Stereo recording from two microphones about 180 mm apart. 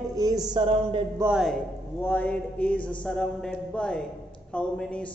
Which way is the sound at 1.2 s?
10° right (ahead or behind).